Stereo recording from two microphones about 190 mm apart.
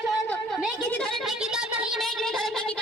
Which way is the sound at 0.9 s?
5° left (ahead or behind).